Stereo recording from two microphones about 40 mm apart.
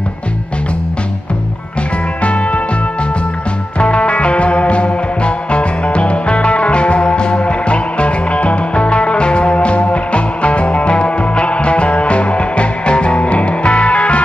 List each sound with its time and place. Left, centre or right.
2.2 s music: left
3.8 s music: left